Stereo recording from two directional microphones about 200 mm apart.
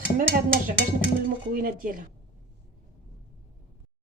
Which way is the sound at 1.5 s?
45° right (ahead or behind).